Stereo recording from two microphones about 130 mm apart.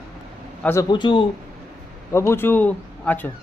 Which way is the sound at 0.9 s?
40° left (ahead or behind).